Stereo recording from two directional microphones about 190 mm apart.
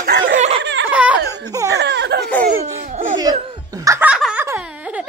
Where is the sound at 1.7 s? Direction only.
65° right (ahead or behind).